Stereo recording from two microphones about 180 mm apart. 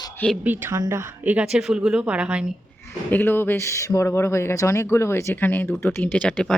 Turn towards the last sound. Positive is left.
turn(degrees=5)  # may be behind; listen again after turning